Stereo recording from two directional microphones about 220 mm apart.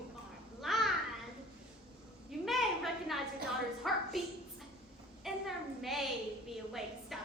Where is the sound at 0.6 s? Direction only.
Centre (ahead or behind).